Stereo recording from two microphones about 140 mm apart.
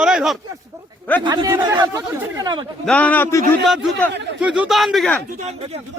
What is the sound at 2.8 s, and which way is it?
Speech, 10° left (ahead or behind).